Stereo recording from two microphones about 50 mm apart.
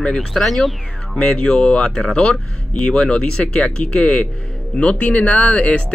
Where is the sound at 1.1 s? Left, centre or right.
Left.